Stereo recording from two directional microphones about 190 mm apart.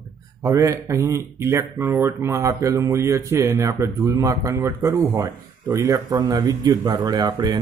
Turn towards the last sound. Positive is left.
turn(degrees=-20)  # may be behind; listen again after turning